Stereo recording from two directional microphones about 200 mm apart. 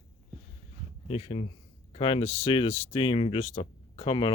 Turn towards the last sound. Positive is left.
turn(degrees=25)  # may be behind; listen again after turning